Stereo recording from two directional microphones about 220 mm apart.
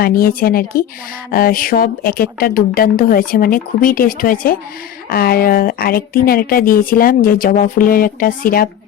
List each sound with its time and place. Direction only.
0.0 s speech: 45° left (ahead or behind)